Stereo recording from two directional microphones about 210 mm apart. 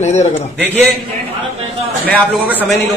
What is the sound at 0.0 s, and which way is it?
Speech, 35° left (ahead or behind).